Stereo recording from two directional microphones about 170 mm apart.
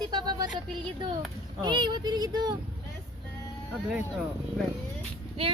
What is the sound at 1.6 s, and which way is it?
Speech, 25° right (ahead or behind).